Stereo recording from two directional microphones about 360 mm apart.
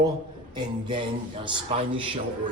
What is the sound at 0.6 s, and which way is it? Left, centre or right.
Speech, centre.